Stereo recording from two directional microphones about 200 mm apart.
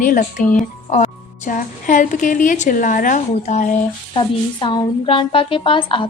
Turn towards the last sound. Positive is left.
turn(degrees=25)  # may be behind; listen again after turning